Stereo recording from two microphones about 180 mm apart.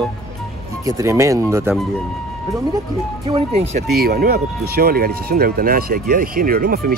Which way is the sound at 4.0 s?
60° right (ahead or behind).